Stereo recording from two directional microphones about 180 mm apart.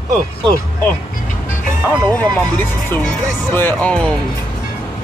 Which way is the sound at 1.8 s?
15° right (ahead or behind).